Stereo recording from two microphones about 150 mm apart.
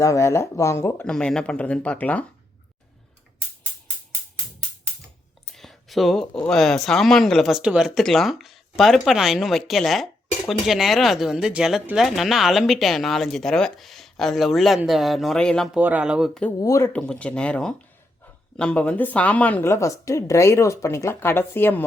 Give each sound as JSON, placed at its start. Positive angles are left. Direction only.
{"t": 0.0, "sound": "speech", "side_deg": 20}
{"t": 1.1, "sound": "speech", "side_deg": 5}
{"t": 5.5, "sound": "a sound", "side_deg": 0}
{"t": 6.4, "sound": "speech", "side_deg": 5}
{"t": 15.8, "sound": "speech", "side_deg": -10}
{"t": 16.6, "sound": "speech", "side_deg": 20}
{"t": 16.9, "sound": "speech", "side_deg": 10}